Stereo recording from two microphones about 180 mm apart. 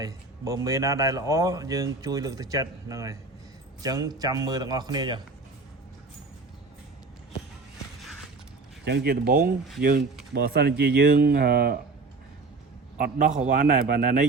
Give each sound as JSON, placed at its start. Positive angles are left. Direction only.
{"t": 0.0, "sound": "speech", "side_deg": -15}
{"t": 8.8, "sound": "speech", "side_deg": -60}
{"t": 13.0, "sound": "a man's voice", "side_deg": -40}